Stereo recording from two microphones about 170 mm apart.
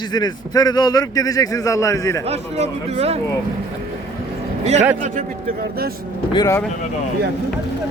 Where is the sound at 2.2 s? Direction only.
40° right (ahead or behind).